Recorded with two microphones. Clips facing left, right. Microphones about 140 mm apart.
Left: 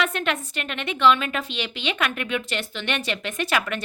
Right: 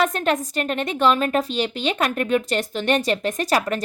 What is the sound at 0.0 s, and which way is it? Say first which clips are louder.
A woman's voice: right 5 dB; 40° right (ahead or behind).